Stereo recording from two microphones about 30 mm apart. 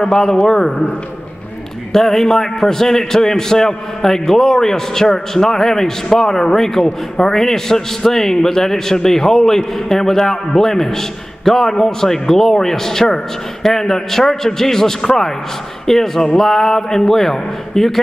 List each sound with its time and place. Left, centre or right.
0.0 s a man's voice: centre
1.9 s a man's voice: centre
7.3 s a man's voice: centre